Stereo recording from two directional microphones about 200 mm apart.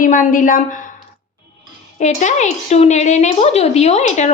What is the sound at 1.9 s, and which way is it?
Speech, 35° left (ahead or behind).